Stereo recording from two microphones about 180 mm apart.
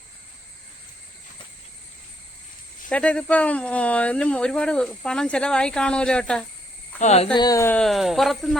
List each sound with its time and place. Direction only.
2.9 s speech: 5° left (ahead or behind)
7.0 s speech: 35° left (ahead or behind)
7.3 s speech: 20° left (ahead or behind); by 8.5 s centre (ahead or behind)